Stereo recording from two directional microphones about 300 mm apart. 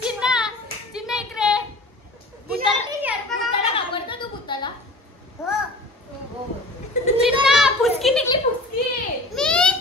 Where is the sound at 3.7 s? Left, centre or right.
Centre.